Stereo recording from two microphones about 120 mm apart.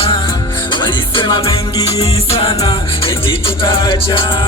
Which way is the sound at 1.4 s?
30° left (ahead or behind).